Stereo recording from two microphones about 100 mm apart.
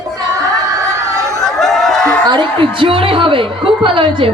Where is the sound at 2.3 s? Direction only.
60° right (ahead or behind).